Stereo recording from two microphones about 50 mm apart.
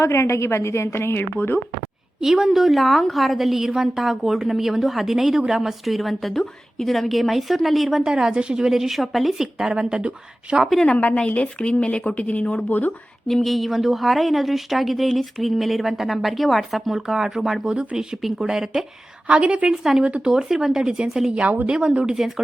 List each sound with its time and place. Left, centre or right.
0.0 s a woman's voice: left
2.2 s a woman's voice: centre; by 10.6 s right
10.9 s speech: left
12.6 s speech: left
13.2 s a woman's voice: centre
19.3 s a woman's voice: right
19.6 s a woman's voice: centre